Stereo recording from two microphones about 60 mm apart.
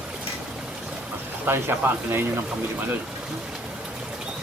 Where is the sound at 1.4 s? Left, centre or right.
Right.